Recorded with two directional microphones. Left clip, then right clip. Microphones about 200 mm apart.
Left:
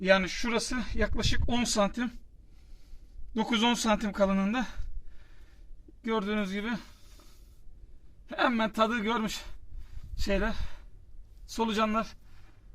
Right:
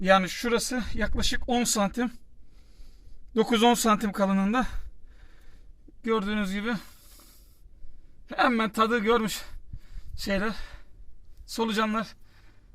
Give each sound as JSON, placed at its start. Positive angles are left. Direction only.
{"t": 0.0, "sound": "speech", "side_deg": -55}
{"t": 3.3, "sound": "speech", "side_deg": -55}